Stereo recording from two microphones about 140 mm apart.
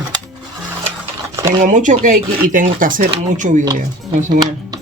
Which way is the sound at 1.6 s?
65° right (ahead or behind).